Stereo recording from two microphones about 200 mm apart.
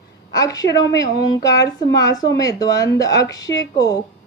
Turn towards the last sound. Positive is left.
turn(degrees=20)  # may be behind; listen again after turning